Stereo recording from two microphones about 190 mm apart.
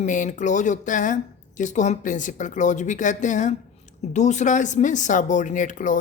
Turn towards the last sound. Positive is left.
turn(degrees=40)  # may be behind; listen again after turning